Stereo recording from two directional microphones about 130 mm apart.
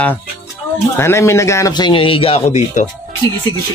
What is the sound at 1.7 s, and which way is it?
Speech, 40° left (ahead or behind).